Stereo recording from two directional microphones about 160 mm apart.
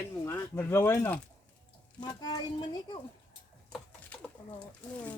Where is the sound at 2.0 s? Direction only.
25° left (ahead or behind).